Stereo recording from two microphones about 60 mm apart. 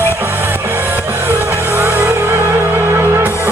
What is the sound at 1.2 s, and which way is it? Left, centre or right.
Vehicle, right.